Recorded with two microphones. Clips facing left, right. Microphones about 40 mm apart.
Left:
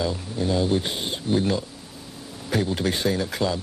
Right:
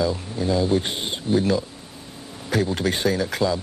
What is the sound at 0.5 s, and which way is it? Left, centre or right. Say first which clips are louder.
Speech: right 2 dB; left.